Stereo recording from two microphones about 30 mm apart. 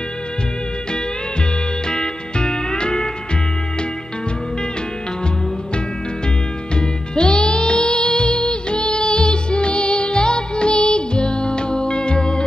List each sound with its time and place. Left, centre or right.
1.9 s music: left
6.7 s music: left